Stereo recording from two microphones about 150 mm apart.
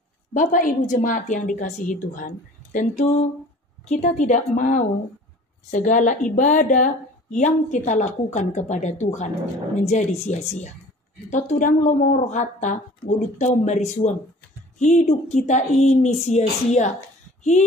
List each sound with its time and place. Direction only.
0.3 s a woman's voice: 60° left (ahead or behind)